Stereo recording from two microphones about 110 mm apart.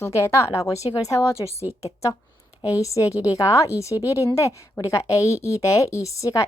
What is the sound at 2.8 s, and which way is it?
A woman's voice, 30° left (ahead or behind).